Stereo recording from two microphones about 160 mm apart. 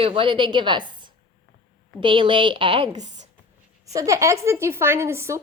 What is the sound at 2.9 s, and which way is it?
Speech, 45° right (ahead or behind).